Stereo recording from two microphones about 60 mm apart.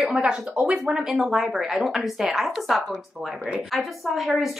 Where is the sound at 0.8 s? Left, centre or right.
Centre.